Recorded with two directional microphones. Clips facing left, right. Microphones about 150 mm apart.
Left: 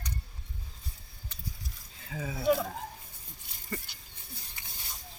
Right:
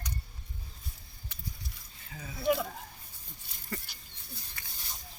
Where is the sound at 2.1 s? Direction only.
90° left.